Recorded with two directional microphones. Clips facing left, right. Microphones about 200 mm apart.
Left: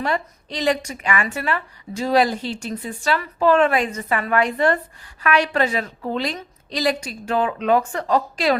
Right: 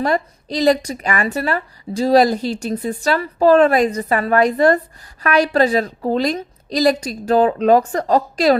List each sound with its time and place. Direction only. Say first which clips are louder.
0.0 s a woman's voice: right 5 dB; 40° right (ahead or behind)